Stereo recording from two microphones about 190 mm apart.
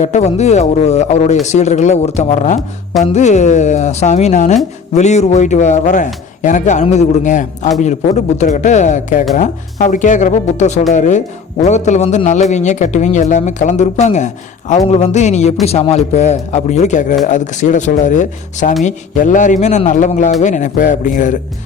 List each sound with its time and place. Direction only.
0.0 s a man's voice: 35° left (ahead or behind)